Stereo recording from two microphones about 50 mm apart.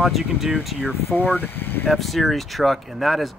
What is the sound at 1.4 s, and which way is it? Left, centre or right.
Speech, left.